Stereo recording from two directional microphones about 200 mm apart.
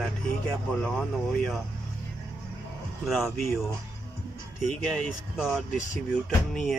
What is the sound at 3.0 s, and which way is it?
Speech, centre (ahead or behind).